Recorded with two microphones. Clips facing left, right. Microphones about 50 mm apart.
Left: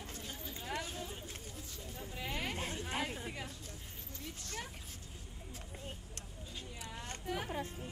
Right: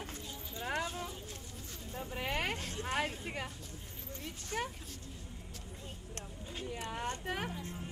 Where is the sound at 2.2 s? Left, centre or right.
Right.